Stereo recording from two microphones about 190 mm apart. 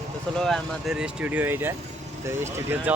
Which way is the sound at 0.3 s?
Centre (ahead or behind).